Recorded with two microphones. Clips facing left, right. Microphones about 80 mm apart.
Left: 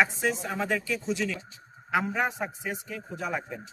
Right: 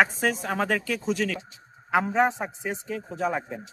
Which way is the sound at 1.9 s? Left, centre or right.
Right.